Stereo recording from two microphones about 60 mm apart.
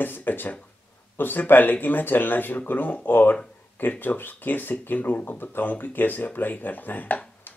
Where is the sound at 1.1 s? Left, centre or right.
Left.